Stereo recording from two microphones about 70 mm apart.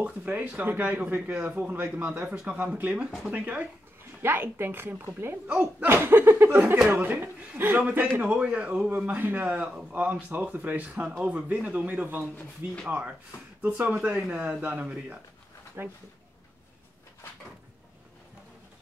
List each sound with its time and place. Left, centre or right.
0.0 s speech: right
4.2 s a woman's voice: right
5.5 s speech: centre
5.9 s a woman's voice: right
8.2 s speech: centre
15.8 s a woman's voice: right